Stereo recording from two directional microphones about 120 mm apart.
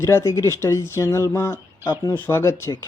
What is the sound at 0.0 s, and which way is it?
A man's voice, 20° left (ahead or behind).